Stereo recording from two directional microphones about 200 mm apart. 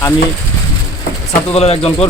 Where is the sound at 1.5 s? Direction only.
30° left (ahead or behind).